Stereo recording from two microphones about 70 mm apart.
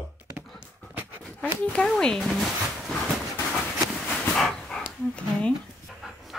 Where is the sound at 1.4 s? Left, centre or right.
Centre.